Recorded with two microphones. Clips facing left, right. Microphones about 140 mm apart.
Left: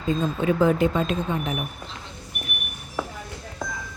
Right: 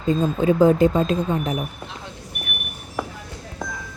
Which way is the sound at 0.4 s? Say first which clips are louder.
Right 5 dB; 40° right (ahead or behind).